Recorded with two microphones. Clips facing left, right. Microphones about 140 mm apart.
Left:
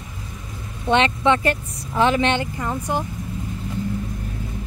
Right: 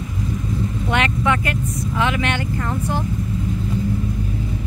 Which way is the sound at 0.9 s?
25° left (ahead or behind).